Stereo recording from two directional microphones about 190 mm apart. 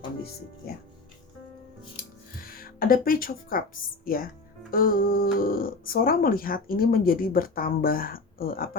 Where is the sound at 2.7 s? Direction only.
50° left (ahead or behind).